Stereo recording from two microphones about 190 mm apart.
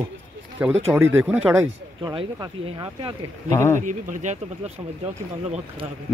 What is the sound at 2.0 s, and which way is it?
Speech, 25° right (ahead or behind).